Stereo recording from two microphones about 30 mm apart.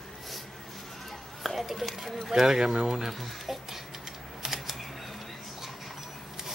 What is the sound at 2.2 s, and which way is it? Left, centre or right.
Speech, centre.